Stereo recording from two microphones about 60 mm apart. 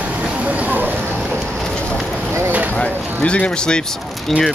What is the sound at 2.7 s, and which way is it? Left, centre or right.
Speech, centre.